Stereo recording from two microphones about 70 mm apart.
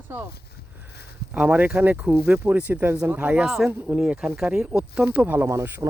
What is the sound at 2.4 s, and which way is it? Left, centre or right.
Speech, right.